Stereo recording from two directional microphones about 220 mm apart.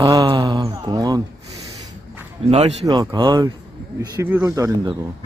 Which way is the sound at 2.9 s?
15° right (ahead or behind).